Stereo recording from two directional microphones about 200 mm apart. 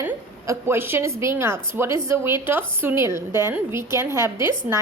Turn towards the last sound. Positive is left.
turn(degrees=-10)  # may be behind; listen again after turning